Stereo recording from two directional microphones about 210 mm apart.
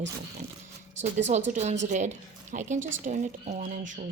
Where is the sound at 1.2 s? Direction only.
35° right (ahead or behind).